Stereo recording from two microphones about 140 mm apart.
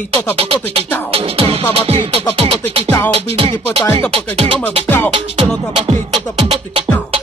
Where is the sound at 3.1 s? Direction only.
45° right (ahead or behind).